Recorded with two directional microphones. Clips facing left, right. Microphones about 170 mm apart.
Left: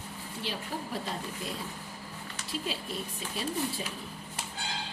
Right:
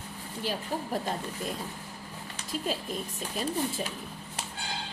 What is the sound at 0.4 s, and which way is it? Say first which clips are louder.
Speech: right 5 dB; 45° right (ahead or behind).